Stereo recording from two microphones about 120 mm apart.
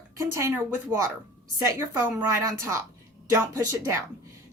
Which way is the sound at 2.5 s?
25° right (ahead or behind).